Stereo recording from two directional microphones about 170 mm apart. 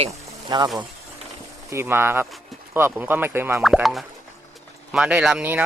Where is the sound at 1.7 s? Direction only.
15° right (ahead or behind).